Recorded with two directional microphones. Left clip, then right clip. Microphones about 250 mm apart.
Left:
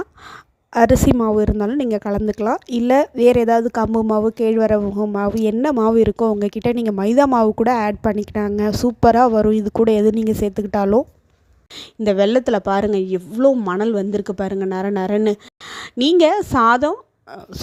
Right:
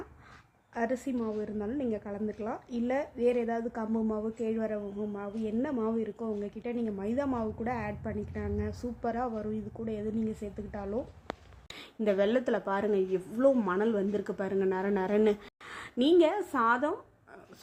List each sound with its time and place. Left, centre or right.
0.7 s a woman's voice: left